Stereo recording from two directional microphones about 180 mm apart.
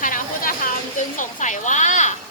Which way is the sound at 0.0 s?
50° left (ahead or behind).